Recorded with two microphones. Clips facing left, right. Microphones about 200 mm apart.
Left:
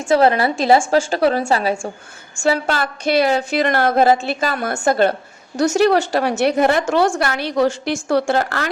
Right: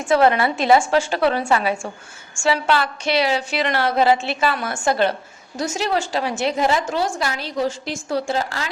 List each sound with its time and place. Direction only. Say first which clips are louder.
0.0 s a woman's voice: left 2 dB; 30° left (ahead or behind)
2.4 s a woman's voice: left 1 dB; 45° left (ahead or behind)
5.5 s a woman's voice: left 8 dB; 70° left (ahead or behind)